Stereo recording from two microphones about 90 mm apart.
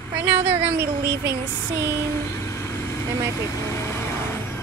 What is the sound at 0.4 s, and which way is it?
Speech, 90° right.